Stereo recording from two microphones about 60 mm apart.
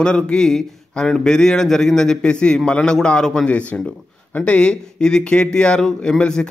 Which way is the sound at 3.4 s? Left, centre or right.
Left.